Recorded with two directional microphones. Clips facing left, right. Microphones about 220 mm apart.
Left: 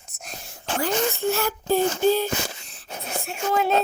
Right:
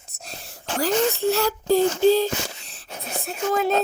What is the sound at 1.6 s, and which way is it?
Female singing, 90° right.